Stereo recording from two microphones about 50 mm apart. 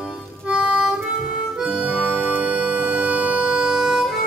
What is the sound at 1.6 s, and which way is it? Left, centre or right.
Harmonica, centre.